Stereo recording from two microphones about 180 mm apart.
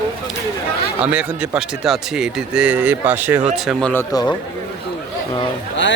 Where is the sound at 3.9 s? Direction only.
15° left (ahead or behind).